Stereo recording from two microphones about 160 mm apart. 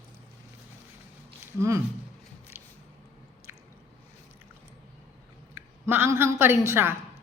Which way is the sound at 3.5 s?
15° right (ahead or behind).